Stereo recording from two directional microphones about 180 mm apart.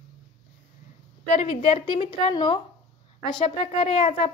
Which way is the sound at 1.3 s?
35° left (ahead or behind).